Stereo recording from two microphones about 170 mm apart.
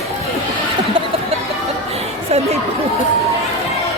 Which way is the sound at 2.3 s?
40° right (ahead or behind).